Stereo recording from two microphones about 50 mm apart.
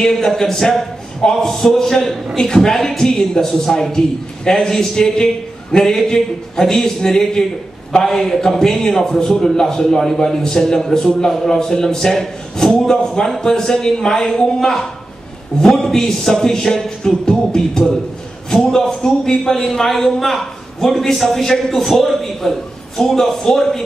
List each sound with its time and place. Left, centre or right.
0.0 s a man's voice: centre